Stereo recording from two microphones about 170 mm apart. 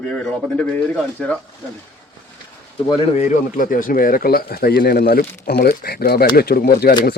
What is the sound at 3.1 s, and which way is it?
Speech, 50° left (ahead or behind).